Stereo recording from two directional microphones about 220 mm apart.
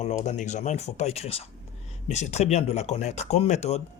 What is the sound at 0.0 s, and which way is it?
Speech, 30° left (ahead or behind).